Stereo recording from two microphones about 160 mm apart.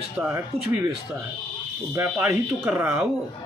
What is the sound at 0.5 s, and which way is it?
Speech, 40° right (ahead or behind).